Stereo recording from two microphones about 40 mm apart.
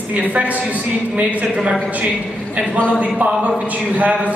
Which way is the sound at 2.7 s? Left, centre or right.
Left.